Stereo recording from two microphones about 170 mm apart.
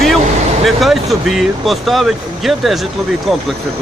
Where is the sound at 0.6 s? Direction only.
Centre (ahead or behind).